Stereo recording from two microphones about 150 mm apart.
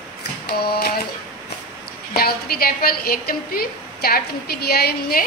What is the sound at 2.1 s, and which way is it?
A woman's voice, 90° left.